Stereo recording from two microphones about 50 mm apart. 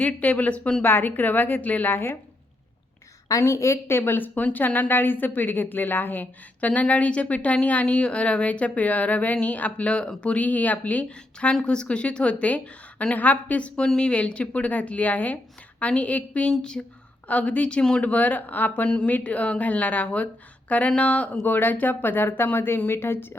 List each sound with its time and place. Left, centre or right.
0.0 s a woman's voice: left
0.8 s a woman's voice: left
1.9 s a woman's voice: left
3.2 s a woman's voice: left
11.6 s a woman's voice: centre
13.1 s a woman's voice: left
13.8 s a woman's voice: centre; by 16.5 s left
16.5 s speech: centre
17.2 s a woman's voice: left
18.0 s a woman's voice: left
18.9 s a woman's voice: left
21.4 s a woman's voice: left